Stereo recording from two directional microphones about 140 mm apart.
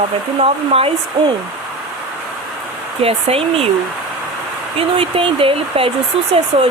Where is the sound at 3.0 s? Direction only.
45° right (ahead or behind).